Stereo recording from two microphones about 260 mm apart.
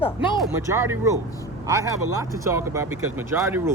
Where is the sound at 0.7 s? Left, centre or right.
Centre.